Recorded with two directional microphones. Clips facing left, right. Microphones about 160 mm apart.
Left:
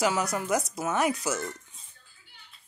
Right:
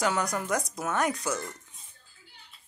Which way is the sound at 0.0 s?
5° left (ahead or behind).